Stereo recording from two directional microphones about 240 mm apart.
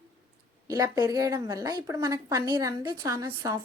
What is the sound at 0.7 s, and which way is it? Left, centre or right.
Speech, centre.